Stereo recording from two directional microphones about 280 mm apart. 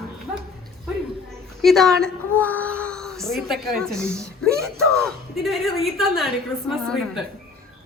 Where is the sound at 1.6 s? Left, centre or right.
Centre.